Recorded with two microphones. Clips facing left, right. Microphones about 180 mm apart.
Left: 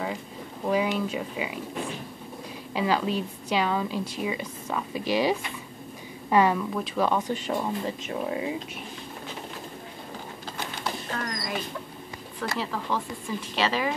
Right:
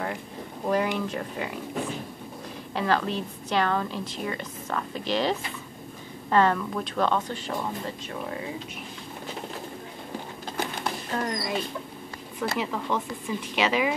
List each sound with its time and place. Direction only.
0.7 s speech: 5° left (ahead or behind)
2.7 s a woman's voice: 10° left (ahead or behind)
11.1 s speech: 25° right (ahead or behind)